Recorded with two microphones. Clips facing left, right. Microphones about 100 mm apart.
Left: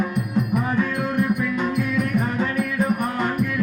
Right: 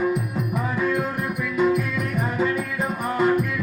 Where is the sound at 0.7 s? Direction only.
5° right (ahead or behind).